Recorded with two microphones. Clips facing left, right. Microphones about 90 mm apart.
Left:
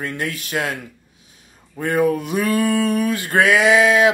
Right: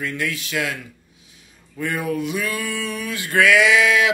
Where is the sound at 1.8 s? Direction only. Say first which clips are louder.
Left 6 dB; 40° left (ahead or behind).